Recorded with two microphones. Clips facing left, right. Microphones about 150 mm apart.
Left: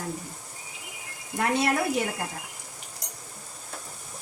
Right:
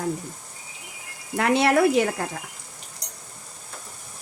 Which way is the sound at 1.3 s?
80° right.